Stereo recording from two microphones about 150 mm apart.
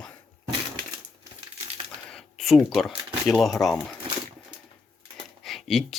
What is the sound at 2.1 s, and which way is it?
Speech, centre (ahead or behind).